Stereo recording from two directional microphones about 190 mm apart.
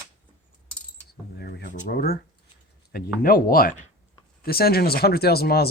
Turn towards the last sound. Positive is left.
turn(degrees=55)  # may be behind; listen again after turning